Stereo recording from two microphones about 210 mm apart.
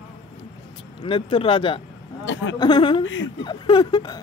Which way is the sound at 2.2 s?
65° left (ahead or behind).